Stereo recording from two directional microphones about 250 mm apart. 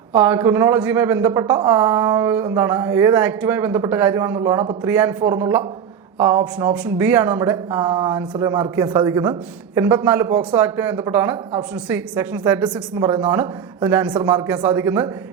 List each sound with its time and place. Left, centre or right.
0.1 s speech: centre